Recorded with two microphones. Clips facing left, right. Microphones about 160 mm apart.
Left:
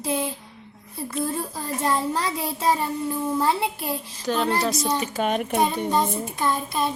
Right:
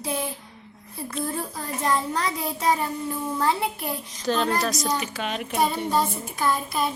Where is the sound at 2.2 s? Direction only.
25° left (ahead or behind).